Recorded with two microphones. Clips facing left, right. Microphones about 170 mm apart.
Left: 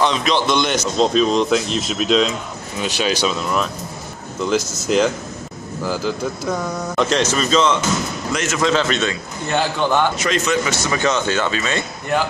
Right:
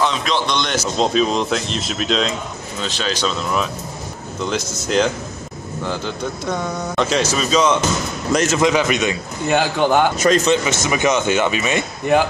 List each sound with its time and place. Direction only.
0.0 s speech: centre (ahead or behind)
4.5 s speech: 5° left (ahead or behind)
8.3 s a man's voice: 40° right (ahead or behind)
8.5 s speech: 15° right (ahead or behind)
10.1 s speech: 45° right (ahead or behind)
10.4 s speech: 25° right (ahead or behind)